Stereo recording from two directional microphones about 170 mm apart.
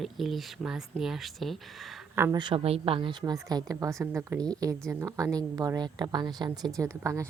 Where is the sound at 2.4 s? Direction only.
30° right (ahead or behind).